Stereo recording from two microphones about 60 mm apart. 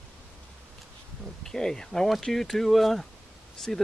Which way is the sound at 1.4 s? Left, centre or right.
Centre.